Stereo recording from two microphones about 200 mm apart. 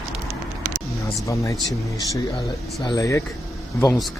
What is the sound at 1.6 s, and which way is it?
Speech, 20° left (ahead or behind).